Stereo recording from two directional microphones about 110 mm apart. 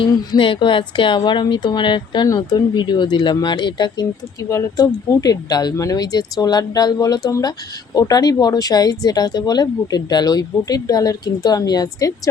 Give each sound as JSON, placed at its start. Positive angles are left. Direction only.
{"t": 0.1, "sound": "speech", "side_deg": 40}
{"t": 2.2, "sound": "speech", "side_deg": 35}